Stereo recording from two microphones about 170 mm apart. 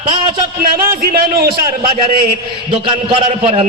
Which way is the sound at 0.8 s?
60° right (ahead or behind).